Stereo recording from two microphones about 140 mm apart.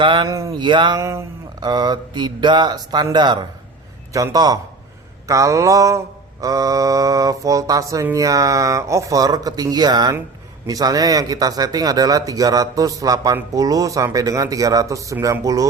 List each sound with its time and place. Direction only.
0.0 s speech: 35° right (ahead or behind)
0.3 s speech: 25° right (ahead or behind)